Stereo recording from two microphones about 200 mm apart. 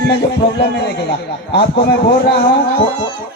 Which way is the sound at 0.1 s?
60° left (ahead or behind).